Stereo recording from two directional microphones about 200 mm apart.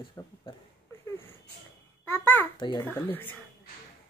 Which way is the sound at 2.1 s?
10° left (ahead or behind).